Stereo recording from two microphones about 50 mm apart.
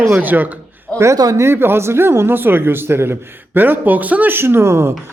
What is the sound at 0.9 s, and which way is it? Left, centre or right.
Speech, right.